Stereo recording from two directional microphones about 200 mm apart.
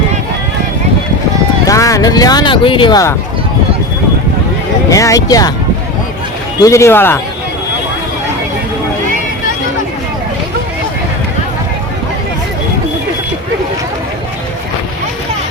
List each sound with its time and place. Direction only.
1.6 s speech: 15° left (ahead or behind)
4.9 s speech: 15° left (ahead or behind)
6.6 s speech: 15° left (ahead or behind)